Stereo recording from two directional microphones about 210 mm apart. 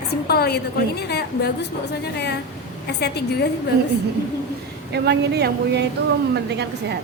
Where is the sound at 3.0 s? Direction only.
50° left (ahead or behind).